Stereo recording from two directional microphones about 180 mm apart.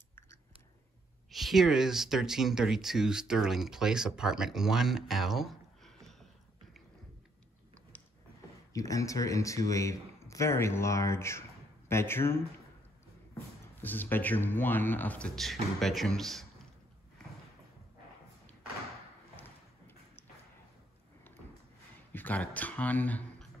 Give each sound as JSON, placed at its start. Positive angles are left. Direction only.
{"t": 1.3, "sound": "speech", "side_deg": 0}
{"t": 7.9, "sound": "a sound", "side_deg": 10}
{"t": 8.7, "sound": "speech", "side_deg": 20}
{"t": 13.7, "sound": "speech", "side_deg": 10}
{"t": 19.3, "sound": "a sound", "side_deg": 10}
{"t": 22.1, "sound": "speech", "side_deg": 10}